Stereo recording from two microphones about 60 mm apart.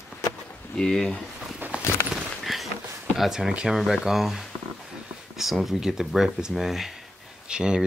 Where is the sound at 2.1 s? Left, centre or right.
Centre.